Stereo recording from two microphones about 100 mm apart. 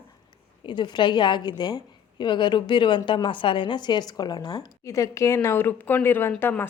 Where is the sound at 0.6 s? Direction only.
50° left (ahead or behind).